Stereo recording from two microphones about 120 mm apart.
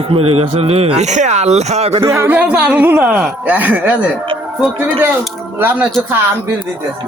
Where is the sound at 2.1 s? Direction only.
20° right (ahead or behind).